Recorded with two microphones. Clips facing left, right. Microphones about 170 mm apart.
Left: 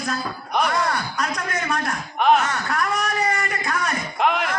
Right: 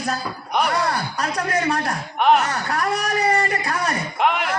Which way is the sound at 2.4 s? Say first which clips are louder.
Right 1 dB; 35° right (ahead or behind).